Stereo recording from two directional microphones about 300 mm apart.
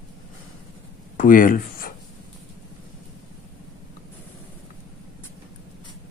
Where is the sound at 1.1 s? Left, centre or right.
Left.